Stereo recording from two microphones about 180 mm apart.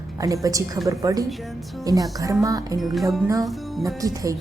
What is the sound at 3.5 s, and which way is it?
Music, centre (ahead or behind).